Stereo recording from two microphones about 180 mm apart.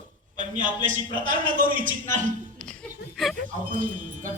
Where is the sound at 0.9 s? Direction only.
45° right (ahead or behind).